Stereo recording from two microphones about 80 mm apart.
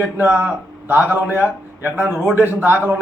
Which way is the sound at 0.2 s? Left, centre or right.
Right.